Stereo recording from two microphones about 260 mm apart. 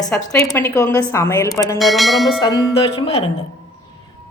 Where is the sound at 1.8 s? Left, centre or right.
Centre.